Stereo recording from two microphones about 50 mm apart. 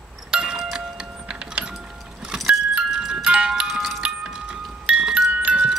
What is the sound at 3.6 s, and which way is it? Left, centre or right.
Music, centre.